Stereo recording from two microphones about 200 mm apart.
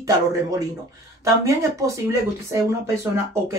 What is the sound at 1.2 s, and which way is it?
Speech, 15° right (ahead or behind).